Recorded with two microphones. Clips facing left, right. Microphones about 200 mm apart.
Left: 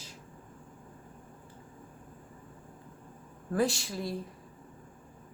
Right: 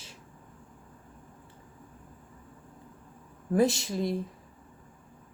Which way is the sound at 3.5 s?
20° right (ahead or behind).